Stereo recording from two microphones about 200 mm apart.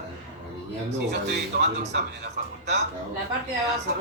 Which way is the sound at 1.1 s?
55° right (ahead or behind).